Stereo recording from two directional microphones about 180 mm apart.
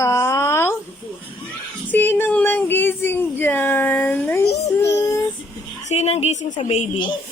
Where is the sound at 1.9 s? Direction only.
10° left (ahead or behind).